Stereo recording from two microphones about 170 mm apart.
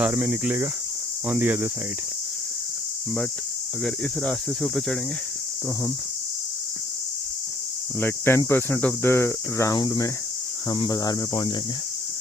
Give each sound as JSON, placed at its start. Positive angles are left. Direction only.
{"t": 0.0, "sound": "speech", "side_deg": -10}
{"t": 3.8, "sound": "speech", "side_deg": 5}
{"t": 7.9, "sound": "speech", "side_deg": 15}